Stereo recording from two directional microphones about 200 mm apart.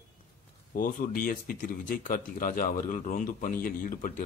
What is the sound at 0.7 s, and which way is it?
Speech, 45° left (ahead or behind).